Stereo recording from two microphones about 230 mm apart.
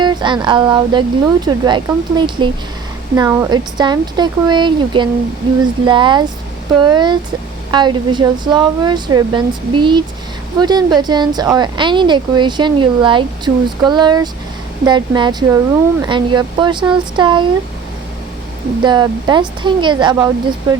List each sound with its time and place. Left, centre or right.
0.0 s speech: centre
18.8 s speech: centre